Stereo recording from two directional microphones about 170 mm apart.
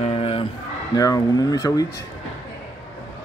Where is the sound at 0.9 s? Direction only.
20° left (ahead or behind).